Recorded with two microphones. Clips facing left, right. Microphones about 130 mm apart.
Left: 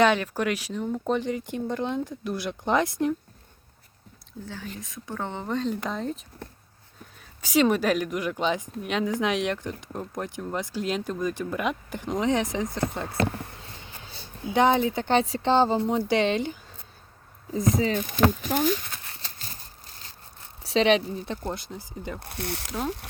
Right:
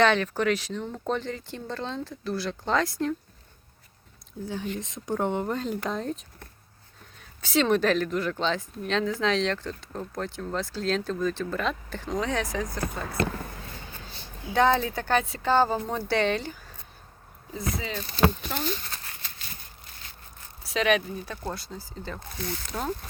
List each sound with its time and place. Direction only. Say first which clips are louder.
0.0 s speech: left 1 dB; 10° left (ahead or behind)
4.4 s speech: right 6 dB; 15° right (ahead or behind); by 6.1 s centre (ahead or behind)
7.2 s speech: left 3 dB; 10° left (ahead or behind)
14.5 s a woman's voice: left 1 dB; 20° left (ahead or behind)
15.2 s a woman's voice: left 1 dB; 30° left (ahead or behind)
17.9 s speech: left 2 dB; 15° left (ahead or behind)
18.6 s speech: left 7 dB; 5° left (ahead or behind)
19.2 s a sound: left 1 dB; 35° left (ahead or behind)
20.7 s a woman's voice: left 3 dB; 30° left (ahead or behind)
22.2 s speech: left 1 dB; 65° left (ahead or behind)
22.7 s speech: left 1 dB; 10° left (ahead or behind)